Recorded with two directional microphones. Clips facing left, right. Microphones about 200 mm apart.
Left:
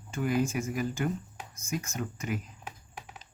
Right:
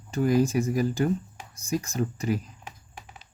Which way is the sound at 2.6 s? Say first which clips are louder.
Even; 5° left (ahead or behind).